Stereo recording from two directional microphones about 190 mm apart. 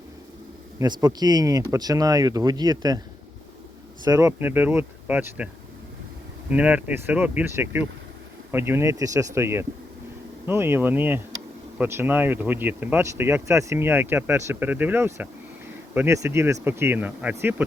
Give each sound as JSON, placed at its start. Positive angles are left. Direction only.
{"t": 0.8, "sound": "speech", "side_deg": -20}
{"t": 4.0, "sound": "speech", "side_deg": -15}
{"t": 6.5, "sound": "speech", "side_deg": -5}